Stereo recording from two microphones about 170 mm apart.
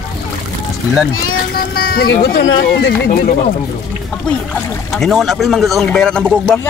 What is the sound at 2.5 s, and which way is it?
Speech, 80° left.